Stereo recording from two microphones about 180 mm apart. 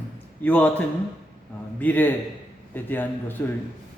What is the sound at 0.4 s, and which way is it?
A man's voice, 10° left (ahead or behind).